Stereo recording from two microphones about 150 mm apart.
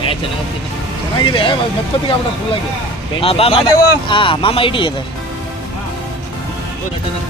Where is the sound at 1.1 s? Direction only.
35° left (ahead or behind).